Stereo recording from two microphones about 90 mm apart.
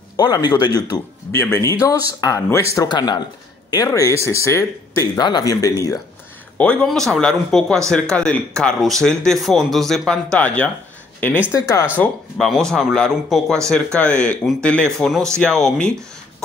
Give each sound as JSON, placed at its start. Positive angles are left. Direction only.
{"t": 0.2, "sound": "speech", "side_deg": 50}
{"t": 1.3, "sound": "speech", "side_deg": 30}
{"t": 2.9, "sound": "speech", "side_deg": 55}
{"t": 3.7, "sound": "speech", "side_deg": 40}
{"t": 6.6, "sound": "speech", "side_deg": 10}
{"t": 11.5, "sound": "speech", "side_deg": 35}
{"t": 12.4, "sound": "speech", "side_deg": 5}